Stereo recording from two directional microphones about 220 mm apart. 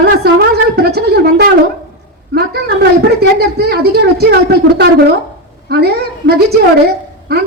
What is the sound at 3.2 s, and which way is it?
A woman's voice, 45° right (ahead or behind).